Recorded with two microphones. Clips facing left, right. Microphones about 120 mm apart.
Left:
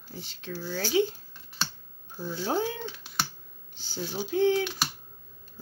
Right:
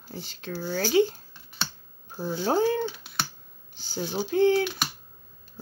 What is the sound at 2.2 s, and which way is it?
Speech, 55° right (ahead or behind).